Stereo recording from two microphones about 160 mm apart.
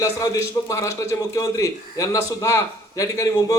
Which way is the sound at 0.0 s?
20° left (ahead or behind).